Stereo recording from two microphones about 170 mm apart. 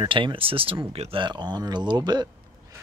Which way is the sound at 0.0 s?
30° right (ahead or behind).